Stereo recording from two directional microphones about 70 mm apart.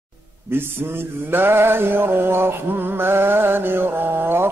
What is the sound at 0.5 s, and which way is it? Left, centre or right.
Mantra, right.